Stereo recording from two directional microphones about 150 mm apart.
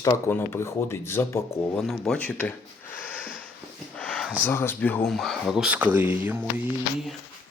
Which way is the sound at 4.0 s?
5° left (ahead or behind).